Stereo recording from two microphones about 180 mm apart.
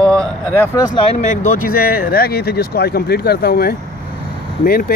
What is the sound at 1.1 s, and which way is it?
Speech, 45° left (ahead or behind).